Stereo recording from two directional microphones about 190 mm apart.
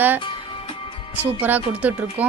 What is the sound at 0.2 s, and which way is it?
Music, 25° left (ahead or behind).